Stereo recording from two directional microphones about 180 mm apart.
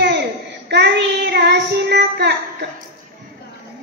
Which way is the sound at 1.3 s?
65° right (ahead or behind).